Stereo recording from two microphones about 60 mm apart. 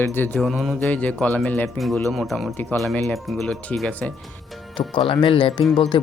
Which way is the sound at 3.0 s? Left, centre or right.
Centre.